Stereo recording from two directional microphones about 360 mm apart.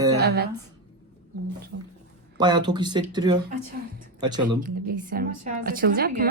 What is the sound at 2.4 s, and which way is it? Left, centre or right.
Speech, centre.